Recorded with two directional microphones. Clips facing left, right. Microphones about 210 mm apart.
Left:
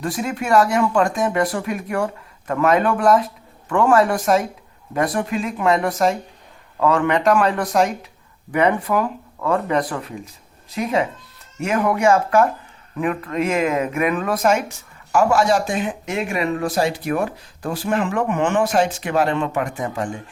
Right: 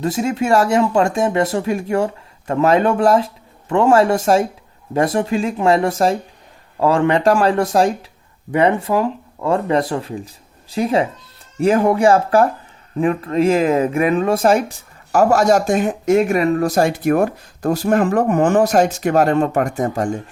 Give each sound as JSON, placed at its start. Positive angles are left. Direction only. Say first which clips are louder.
{"t": 0.0, "sound": "speech", "louder": "right 5 dB", "side_deg": -25}